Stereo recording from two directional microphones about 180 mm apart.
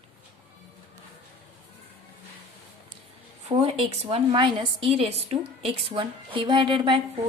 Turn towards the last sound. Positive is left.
turn(degrees=-30)  # may be behind; listen again after turning